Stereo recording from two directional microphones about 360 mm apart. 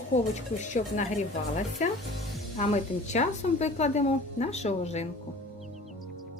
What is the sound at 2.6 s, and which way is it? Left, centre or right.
A woman's voice, centre.